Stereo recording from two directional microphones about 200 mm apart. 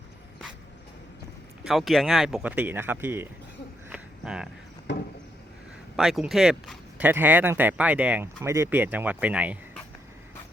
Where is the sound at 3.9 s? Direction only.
5° right (ahead or behind).